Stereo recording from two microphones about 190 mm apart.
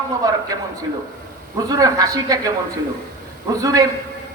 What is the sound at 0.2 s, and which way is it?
Speech, 20° right (ahead or behind).